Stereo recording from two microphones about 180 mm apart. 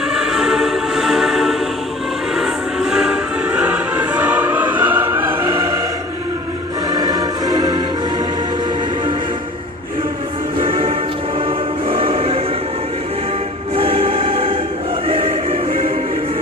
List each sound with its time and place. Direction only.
0.1 s music: 5° right (ahead or behind)
6.9 s music: 20° right (ahead or behind)
11.9 s music: 30° right (ahead or behind)
13.7 s music: 30° right (ahead or behind)